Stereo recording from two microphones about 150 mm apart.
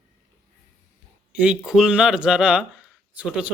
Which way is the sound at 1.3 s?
5° right (ahead or behind).